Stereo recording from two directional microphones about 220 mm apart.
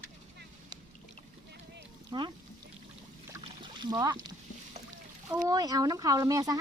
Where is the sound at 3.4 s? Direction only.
20° right (ahead or behind).